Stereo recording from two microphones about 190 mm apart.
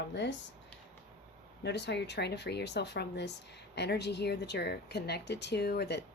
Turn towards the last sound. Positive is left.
turn(degrees=60)  # may be behind; listen again after turning